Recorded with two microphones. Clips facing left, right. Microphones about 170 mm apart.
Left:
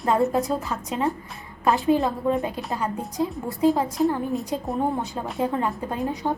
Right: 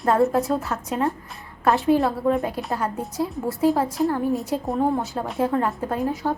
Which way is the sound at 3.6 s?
15° left (ahead or behind).